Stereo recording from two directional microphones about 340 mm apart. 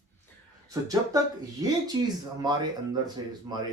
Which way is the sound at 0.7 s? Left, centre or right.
Centre.